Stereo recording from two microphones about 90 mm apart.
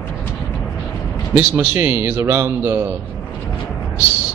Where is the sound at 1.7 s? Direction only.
25° right (ahead or behind).